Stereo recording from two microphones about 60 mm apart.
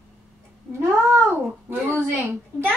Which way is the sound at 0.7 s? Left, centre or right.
Right.